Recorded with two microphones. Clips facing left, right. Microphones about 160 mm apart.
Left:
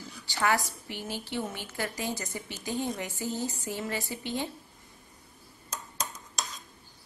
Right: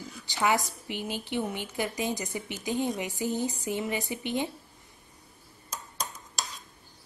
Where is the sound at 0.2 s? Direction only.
20° right (ahead or behind).